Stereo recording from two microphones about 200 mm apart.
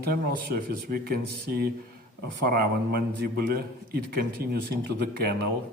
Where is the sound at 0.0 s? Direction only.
50° right (ahead or behind).